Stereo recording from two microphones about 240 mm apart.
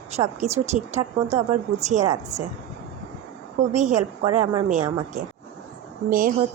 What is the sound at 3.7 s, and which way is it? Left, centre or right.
Speech, right.